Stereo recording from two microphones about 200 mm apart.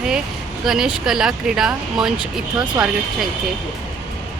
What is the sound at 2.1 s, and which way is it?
Speech, 20° right (ahead or behind).